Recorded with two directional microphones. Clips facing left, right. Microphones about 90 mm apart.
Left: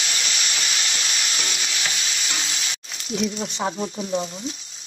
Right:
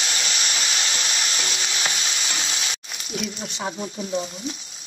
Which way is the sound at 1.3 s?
35° right (ahead or behind).